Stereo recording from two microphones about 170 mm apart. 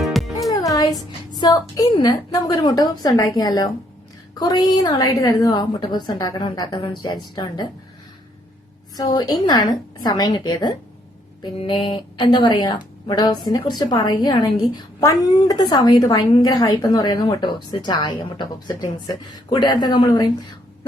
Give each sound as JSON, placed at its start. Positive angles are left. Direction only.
{"t": 0.0, "sound": "music", "side_deg": 0}
{"t": 0.5, "sound": "a woman's voice", "side_deg": 20}
{"t": 9.0, "sound": "a woman's voice", "side_deg": 25}